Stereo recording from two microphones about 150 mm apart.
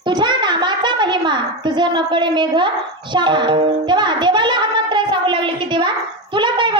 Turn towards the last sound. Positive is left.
turn(degrees=-30)  # may be behind; listen again after turning